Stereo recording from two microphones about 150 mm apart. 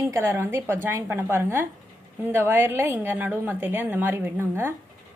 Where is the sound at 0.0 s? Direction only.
20° right (ahead or behind).